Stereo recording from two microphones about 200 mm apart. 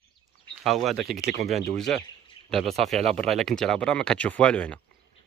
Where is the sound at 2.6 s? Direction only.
30° right (ahead or behind).